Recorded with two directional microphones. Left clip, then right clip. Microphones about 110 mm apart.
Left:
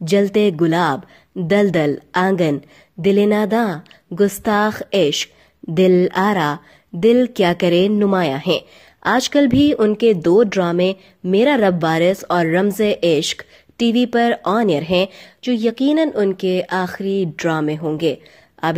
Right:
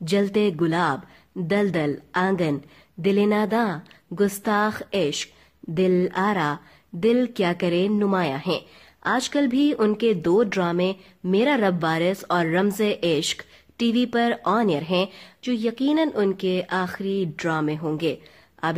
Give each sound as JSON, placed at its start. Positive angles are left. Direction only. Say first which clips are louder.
{"t": 0.0, "sound": "speech", "louder": "left 7 dB", "side_deg": 30}
{"t": 9.8, "sound": "speech", "louder": "left 7 dB", "side_deg": 25}